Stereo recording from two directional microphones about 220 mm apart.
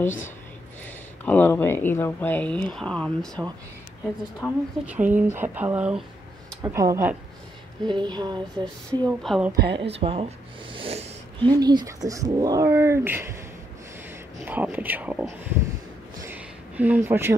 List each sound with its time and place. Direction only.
0.8 s speech: 5° left (ahead or behind)
4.4 s speech: 5° right (ahead or behind)
9.2 s a woman's voice: centre (ahead or behind)
9.8 s speech: 25° right (ahead or behind); by 13.4 s 10° right (ahead or behind)
14.4 s speech: 10° right (ahead or behind)
16.2 s a sound: 10° right (ahead or behind)